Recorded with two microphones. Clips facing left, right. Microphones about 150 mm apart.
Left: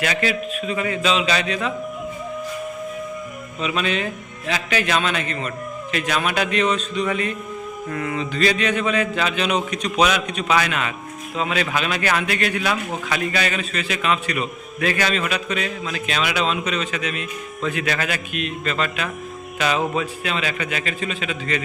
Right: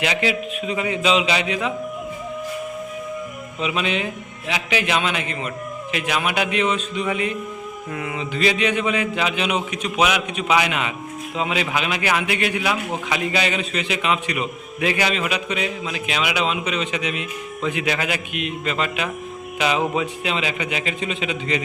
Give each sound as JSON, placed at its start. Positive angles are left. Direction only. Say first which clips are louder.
{"t": 0.0, "sound": "a man's voice", "louder": "even", "side_deg": -15}
{"t": 3.6, "sound": "a man's voice", "louder": "even", "side_deg": -15}